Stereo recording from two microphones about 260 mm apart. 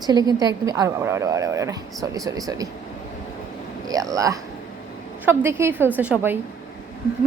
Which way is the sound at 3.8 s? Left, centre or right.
Centre.